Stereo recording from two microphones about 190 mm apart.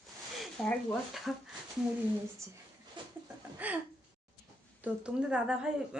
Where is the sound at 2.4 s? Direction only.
15° right (ahead or behind).